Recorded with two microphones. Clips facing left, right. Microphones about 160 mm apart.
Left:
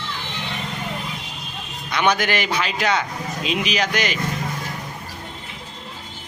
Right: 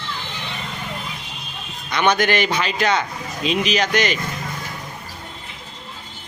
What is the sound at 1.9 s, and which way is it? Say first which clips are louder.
A man's voice: right 2 dB; 5° left (ahead or behind).